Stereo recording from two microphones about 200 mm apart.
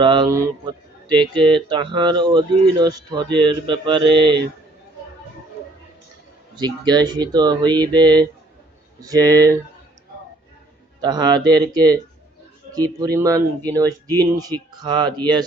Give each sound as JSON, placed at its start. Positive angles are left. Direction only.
{"t": 0.0, "sound": "speech", "side_deg": -25}
{"t": 6.6, "sound": "speech", "side_deg": -20}
{"t": 11.0, "sound": "speech", "side_deg": -20}